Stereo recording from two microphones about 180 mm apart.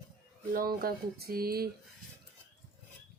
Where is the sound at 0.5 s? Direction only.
55° right (ahead or behind).